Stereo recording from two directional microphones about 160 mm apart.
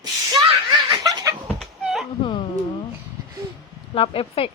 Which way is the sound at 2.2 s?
30° left (ahead or behind).